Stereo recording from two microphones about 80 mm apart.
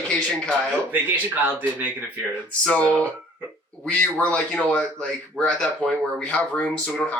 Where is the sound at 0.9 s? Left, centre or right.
Right.